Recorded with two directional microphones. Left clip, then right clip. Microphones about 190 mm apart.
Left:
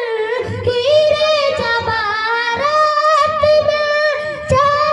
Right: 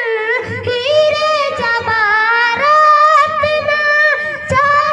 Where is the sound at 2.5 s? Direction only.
25° left (ahead or behind).